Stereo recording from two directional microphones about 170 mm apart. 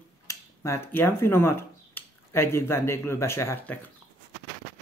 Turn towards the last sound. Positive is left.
turn(degrees=15)  # may be behind; listen again after turning